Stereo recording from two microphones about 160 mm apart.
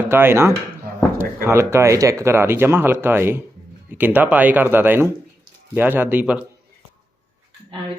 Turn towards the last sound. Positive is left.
turn(degrees=-10)  # may be behind; listen again after turning